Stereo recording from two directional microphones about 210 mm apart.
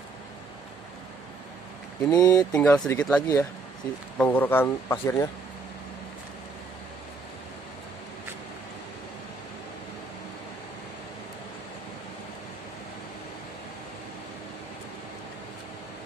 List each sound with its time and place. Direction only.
2.0 s speech: 15° left (ahead or behind)
2.5 s speech: 5° left (ahead or behind)